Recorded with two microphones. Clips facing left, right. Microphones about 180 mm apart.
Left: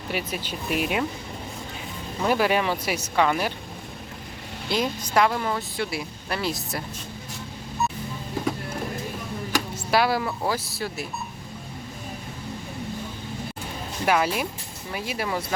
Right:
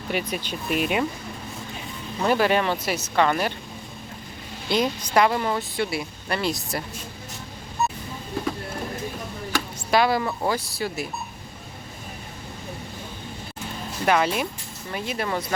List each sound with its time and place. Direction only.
0.1 s speech: 5° left (ahead or behind)
2.2 s speech: 5° left (ahead or behind)
4.7 s speech: centre (ahead or behind)
9.5 s speech: 5° left (ahead or behind)
14.0 s speech: 5° left (ahead or behind)